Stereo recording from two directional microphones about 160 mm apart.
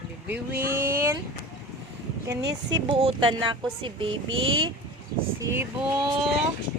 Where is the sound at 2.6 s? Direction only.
35° right (ahead or behind).